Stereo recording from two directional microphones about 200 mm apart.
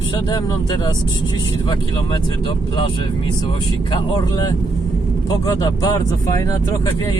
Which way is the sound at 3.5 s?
25° left (ahead or behind).